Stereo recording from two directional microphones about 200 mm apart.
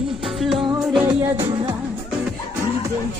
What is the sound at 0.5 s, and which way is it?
Music, 20° right (ahead or behind).